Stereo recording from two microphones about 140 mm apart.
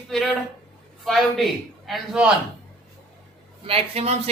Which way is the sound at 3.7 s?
45° right (ahead or behind).